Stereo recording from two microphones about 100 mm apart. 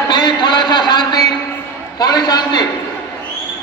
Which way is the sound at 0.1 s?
45° left (ahead or behind).